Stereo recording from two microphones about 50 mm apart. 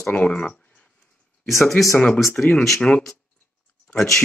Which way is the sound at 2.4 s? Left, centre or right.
Left.